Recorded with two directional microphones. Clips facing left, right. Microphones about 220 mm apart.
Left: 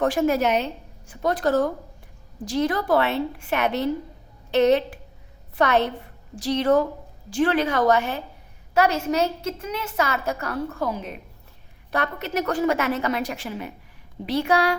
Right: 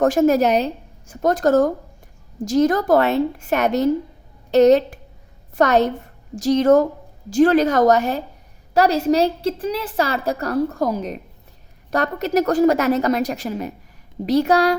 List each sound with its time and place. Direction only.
0.0 s a woman's voice: 45° right (ahead or behind)